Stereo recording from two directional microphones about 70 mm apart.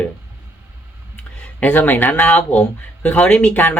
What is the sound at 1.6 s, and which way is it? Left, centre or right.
A woman's voice, left.